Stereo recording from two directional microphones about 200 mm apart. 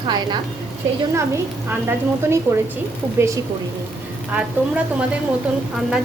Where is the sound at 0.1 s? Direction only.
20° right (ahead or behind).